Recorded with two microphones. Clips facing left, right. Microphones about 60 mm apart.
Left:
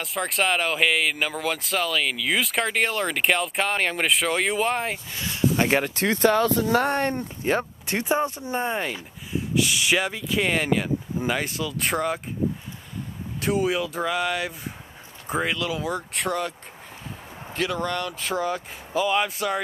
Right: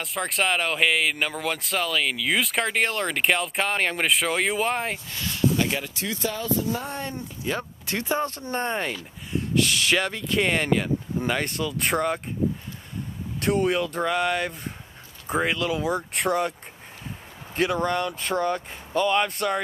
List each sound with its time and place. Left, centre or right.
0.0 s speech: centre
5.1 s speech: centre
5.7 s speech: left
7.4 s speech: left; by 12.2 s centre
13.4 s speech: centre
17.6 s speech: centre